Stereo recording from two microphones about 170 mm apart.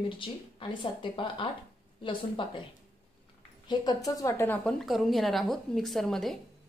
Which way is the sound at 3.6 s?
25° left (ahead or behind).